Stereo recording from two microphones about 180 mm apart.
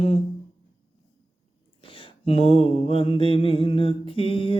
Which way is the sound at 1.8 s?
30° left (ahead or behind).